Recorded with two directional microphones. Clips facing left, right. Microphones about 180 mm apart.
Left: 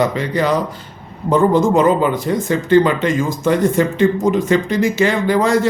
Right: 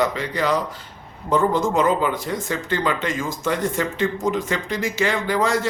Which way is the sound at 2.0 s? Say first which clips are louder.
Left 6 dB; 20° left (ahead or behind).